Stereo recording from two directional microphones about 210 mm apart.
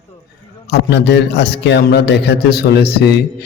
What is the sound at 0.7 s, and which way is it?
A man's voice, 55° left (ahead or behind).